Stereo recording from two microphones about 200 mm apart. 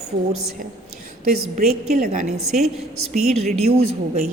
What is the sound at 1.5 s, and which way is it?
Speech, 35° right (ahead or behind).